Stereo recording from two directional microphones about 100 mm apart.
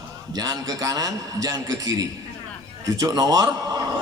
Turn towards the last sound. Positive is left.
turn(degrees=-40)  # may be behind; listen again after turning